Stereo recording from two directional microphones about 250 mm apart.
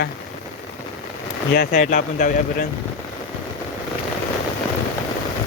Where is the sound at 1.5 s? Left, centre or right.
Left.